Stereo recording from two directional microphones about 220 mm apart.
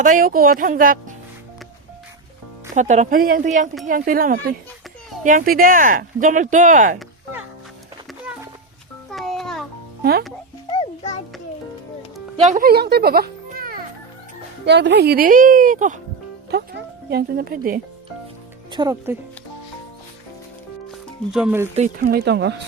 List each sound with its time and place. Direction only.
0.0 s speech: 35° right (ahead or behind)
2.7 s speech: 30° right (ahead or behind)
9.0 s a sound: centre (ahead or behind)
10.0 s speech: 45° right (ahead or behind)
10.7 s music: 25° left (ahead or behind)
12.4 s a child's voice: 35° right (ahead or behind)
16.5 s speech: 50° right (ahead or behind)
18.7 s speech: 20° right (ahead or behind)
21.3 s speech: 5° right (ahead or behind)
21.9 s speech: 45° right (ahead or behind)